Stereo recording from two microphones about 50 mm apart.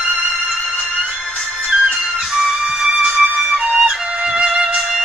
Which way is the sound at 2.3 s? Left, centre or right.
Centre.